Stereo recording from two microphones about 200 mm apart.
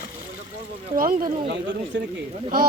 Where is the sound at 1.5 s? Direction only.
65° right (ahead or behind).